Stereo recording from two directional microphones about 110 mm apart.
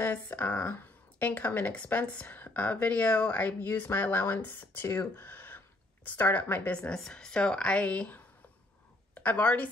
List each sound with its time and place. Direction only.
0.0 s speech: 15° left (ahead or behind)